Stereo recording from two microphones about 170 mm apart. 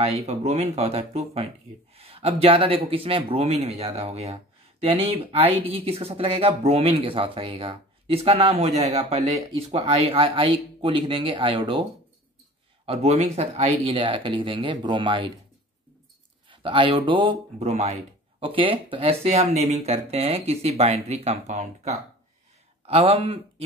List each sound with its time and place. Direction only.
0.0 s speech: 40° right (ahead or behind)
12.8 s speech: 35° right (ahead or behind)
16.4 s speech: 30° right (ahead or behind)